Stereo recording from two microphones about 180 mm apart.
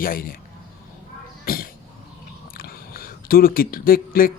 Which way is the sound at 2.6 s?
55° left (ahead or behind).